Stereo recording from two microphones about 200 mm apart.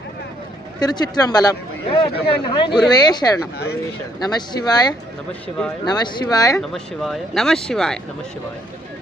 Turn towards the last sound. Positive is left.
turn(degrees=0)  # may be behind; listen again after turning